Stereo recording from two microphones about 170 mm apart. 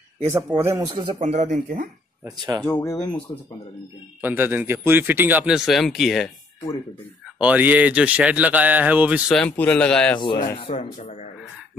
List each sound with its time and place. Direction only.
0.3 s speech: 15° right (ahead or behind)
1.2 s speech: 45° right (ahead or behind)
2.2 s speech: 20° right (ahead or behind)
2.6 s speech: 15° left (ahead or behind)
4.2 s speech: 10° right (ahead or behind)
7.3 s speech: 10° right (ahead or behind)
9.3 s speech: 5° left (ahead or behind)
10.7 s speech: 45° left (ahead or behind)